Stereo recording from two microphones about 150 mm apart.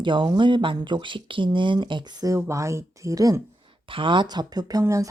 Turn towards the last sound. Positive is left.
turn(degrees=-20)  # may be behind; listen again after turning